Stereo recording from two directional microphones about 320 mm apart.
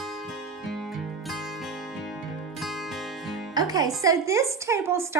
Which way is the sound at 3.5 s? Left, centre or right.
Centre.